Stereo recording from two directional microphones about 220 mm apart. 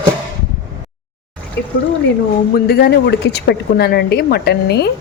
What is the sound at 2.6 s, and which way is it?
A woman's voice, 45° left (ahead or behind).